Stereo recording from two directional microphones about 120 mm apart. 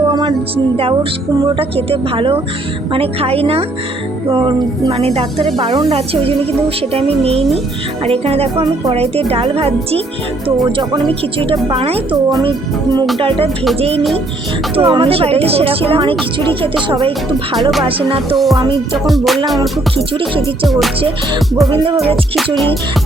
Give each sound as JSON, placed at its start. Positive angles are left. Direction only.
{"t": 0.1, "sound": "music", "side_deg": -40}
{"t": 1.5, "sound": "a woman's voice", "side_deg": -50}
{"t": 4.3, "sound": "a woman's voice", "side_deg": -40}
{"t": 12.1, "sound": "a child's voice", "side_deg": -35}
{"t": 13.1, "sound": "speech", "side_deg": -45}
{"t": 13.7, "sound": "a woman's voice", "side_deg": -55}
{"t": 17.6, "sound": "music", "side_deg": 0}
{"t": 17.8, "sound": "speech", "side_deg": -50}
{"t": 19.0, "sound": "music", "side_deg": 0}
{"t": 20.1, "sound": "speech", "side_deg": -50}
{"t": 20.7, "sound": "music", "side_deg": 0}